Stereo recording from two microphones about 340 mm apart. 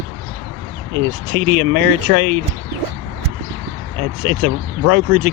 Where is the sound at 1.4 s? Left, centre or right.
Right.